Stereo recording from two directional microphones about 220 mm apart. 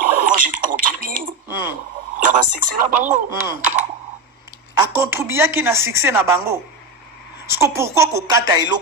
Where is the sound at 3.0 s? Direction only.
35° right (ahead or behind).